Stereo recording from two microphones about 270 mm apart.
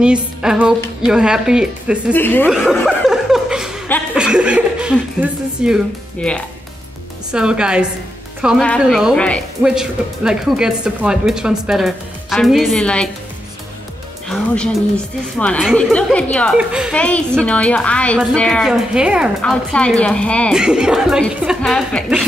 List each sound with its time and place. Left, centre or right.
0.0 s speech: centre
2.1 s speech: centre
2.7 s chuckle: centre
7.3 s speech: centre
14.3 s speech: centre